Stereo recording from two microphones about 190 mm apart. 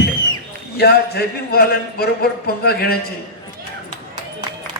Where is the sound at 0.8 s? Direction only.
55° left (ahead or behind).